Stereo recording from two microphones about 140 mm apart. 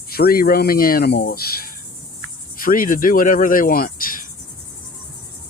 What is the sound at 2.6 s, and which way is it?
Speech, 80° left.